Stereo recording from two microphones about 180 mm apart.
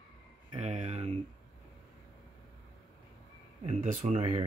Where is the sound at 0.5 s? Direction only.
40° right (ahead or behind).